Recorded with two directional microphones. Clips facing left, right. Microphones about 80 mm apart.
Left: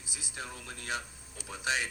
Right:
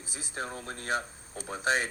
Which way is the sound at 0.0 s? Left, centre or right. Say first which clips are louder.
Right 6 dB; right.